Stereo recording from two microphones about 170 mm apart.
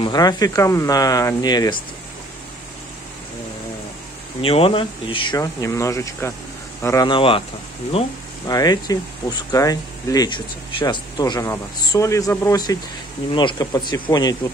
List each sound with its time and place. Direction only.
0.0 s speech: 25° left (ahead or behind)
4.4 s speech: 35° left (ahead or behind); by 7.1 s 15° left (ahead or behind)
7.1 s speech: 30° left (ahead or behind)
8.5 s speech: 20° left (ahead or behind)